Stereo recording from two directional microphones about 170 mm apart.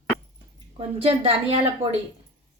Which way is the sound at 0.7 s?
35° right (ahead or behind).